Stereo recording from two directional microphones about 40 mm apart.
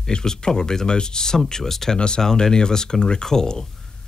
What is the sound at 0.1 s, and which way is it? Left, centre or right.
Speech, centre.